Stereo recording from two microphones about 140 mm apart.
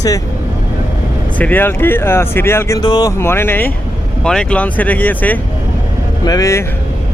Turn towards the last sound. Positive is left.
turn(degrees=20)  # may be behind; listen again after turning